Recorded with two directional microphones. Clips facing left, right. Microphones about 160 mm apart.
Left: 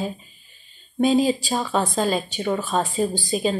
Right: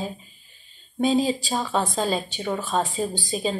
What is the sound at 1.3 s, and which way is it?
A woman's voice, centre (ahead or behind).